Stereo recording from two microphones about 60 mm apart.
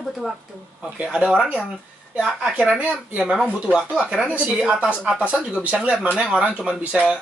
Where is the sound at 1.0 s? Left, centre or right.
Centre.